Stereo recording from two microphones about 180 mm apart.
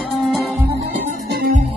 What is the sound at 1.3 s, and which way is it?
Music, 55° right (ahead or behind).